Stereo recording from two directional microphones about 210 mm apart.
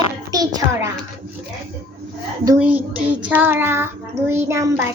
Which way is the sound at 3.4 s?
10° right (ahead or behind).